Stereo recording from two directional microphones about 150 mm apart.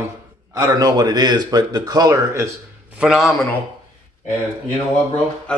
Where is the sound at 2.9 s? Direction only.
Centre (ahead or behind).